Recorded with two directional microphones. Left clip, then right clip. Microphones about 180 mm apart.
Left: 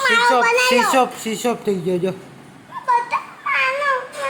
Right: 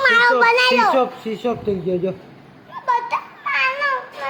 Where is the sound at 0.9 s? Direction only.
15° left (ahead or behind).